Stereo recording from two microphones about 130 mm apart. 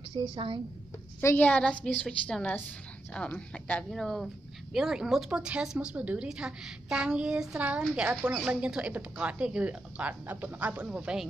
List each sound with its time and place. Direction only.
0.1 s a woman's voice: 40° right (ahead or behind)
1.2 s a woman's voice: 15° left (ahead or behind); by 11.2 s 5° right (ahead or behind)